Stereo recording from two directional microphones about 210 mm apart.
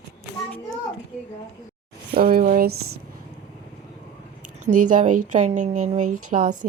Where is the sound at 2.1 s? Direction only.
45° right (ahead or behind).